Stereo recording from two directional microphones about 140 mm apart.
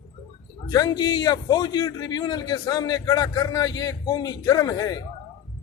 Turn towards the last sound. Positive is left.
turn(degrees=25)  # may be behind; listen again after turning